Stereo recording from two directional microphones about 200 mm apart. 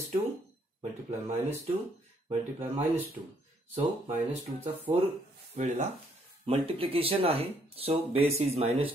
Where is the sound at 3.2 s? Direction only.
20° right (ahead or behind).